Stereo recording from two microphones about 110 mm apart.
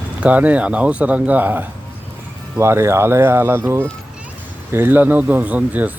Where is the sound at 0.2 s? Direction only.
15° right (ahead or behind).